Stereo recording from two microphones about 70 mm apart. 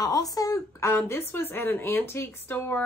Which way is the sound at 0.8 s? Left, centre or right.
Left.